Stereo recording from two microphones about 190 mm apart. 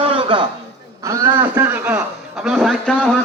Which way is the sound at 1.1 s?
10° right (ahead or behind).